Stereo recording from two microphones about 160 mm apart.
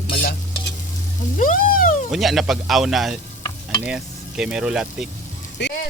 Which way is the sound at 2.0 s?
Centre (ahead or behind).